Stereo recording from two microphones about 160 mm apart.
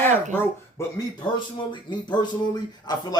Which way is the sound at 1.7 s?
30° left (ahead or behind).